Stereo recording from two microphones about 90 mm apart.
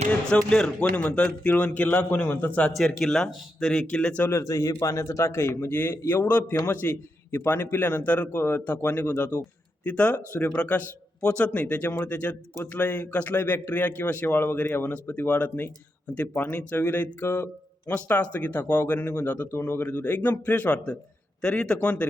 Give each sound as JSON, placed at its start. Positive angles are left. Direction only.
{"t": 0.3, "sound": "speech", "side_deg": 5}
{"t": 2.7, "sound": "speech", "side_deg": 5}
{"t": 4.2, "sound": "a man's voice", "side_deg": 25}
{"t": 4.4, "sound": "a man's voice", "side_deg": 40}